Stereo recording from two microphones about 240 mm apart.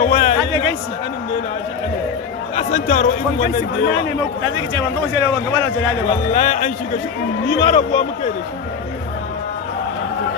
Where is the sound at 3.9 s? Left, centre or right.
Left.